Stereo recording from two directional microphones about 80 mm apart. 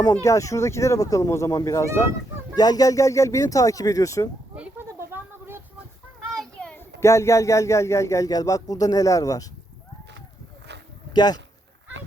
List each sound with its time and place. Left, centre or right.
0.3 s speech: left
2.6 s speech: left
5.1 s a sound: right
6.6 s a sound: centre
7.0 s speech: left
11.1 s speech: left